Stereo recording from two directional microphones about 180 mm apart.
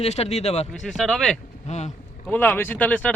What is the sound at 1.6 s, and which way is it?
Speech, 40° left (ahead or behind).